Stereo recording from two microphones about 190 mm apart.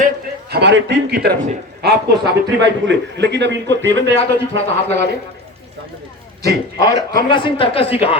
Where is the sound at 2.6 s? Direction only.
70° right (ahead or behind).